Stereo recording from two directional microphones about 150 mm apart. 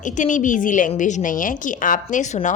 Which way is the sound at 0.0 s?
60° left (ahead or behind).